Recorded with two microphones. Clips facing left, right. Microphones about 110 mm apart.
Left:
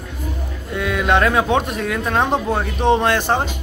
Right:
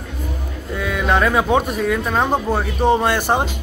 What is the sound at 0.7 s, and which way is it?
Speech, centre (ahead or behind).